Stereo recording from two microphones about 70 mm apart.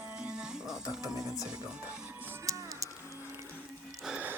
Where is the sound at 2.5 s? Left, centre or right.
Right.